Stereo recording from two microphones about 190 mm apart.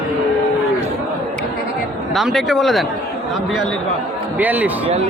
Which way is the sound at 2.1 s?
Centre (ahead or behind).